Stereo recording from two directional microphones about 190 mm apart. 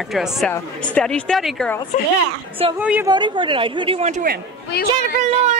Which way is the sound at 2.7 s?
5° right (ahead or behind).